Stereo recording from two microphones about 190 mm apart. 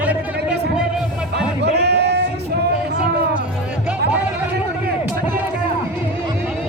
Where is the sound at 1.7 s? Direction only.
60° right (ahead or behind).